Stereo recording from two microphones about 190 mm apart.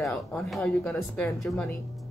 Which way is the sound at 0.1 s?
5° left (ahead or behind).